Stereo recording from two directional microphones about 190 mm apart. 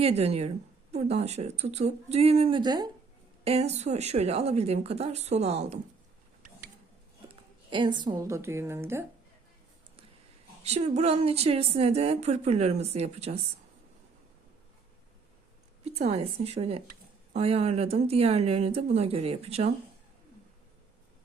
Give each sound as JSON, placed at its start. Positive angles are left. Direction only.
{"t": 0.0, "sound": "speech", "side_deg": -30}
{"t": 3.4, "sound": "speech", "side_deg": -35}
{"t": 7.3, "sound": "a woman's voice", "side_deg": -25}
{"t": 10.6, "sound": "speech", "side_deg": -35}
{"t": 15.8, "sound": "speech", "side_deg": -35}